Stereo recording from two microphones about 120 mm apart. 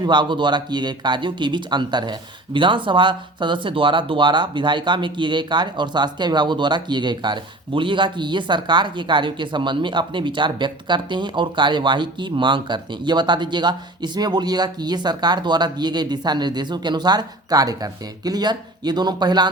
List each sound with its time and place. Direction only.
0.0 s speech: 40° right (ahead or behind)